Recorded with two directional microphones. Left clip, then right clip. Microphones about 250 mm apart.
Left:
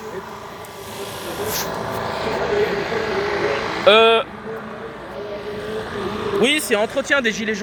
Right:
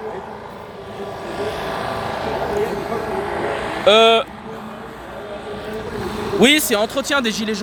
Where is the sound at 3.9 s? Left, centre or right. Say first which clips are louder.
Right 1 dB; centre.